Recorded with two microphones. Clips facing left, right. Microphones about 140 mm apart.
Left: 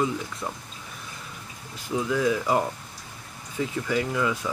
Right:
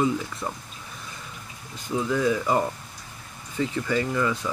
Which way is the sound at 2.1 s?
5° left (ahead or behind).